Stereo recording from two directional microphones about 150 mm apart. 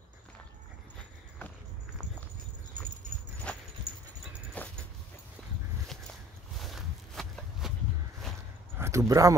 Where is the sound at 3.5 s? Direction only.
10° left (ahead or behind).